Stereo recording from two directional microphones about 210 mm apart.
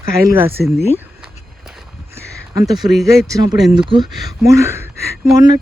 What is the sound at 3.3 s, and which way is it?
Speech, 20° right (ahead or behind).